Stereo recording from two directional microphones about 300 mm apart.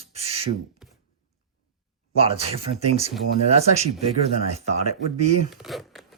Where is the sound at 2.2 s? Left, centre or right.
Centre.